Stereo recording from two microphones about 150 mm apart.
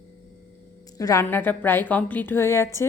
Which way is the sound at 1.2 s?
15° left (ahead or behind).